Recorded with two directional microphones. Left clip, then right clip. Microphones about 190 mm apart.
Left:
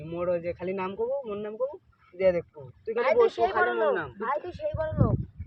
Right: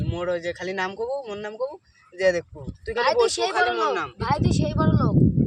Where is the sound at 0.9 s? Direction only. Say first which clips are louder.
Right 2 dB; 25° right (ahead or behind).